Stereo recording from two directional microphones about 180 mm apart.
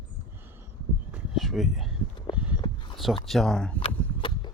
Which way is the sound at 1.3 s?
Centre (ahead or behind).